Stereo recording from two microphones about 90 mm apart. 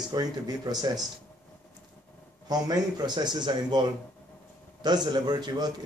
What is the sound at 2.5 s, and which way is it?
A man's voice, 50° right (ahead or behind).